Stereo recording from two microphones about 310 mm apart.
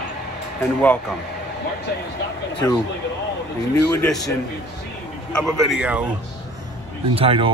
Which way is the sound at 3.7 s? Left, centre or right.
Centre.